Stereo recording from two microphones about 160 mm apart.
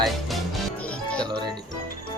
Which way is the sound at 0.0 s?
Centre (ahead or behind).